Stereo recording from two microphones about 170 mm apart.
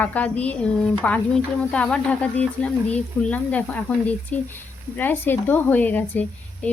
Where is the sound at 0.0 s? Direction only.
10° left (ahead or behind).